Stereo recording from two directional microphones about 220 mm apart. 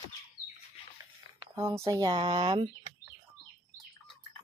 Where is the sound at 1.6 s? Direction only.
15° right (ahead or behind).